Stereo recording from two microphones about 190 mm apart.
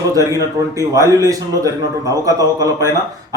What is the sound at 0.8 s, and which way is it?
A man's voice, 15° right (ahead or behind).